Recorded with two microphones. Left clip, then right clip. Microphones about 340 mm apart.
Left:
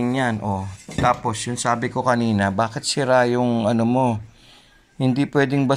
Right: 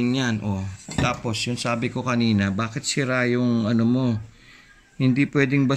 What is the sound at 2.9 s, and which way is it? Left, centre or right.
Speech, left.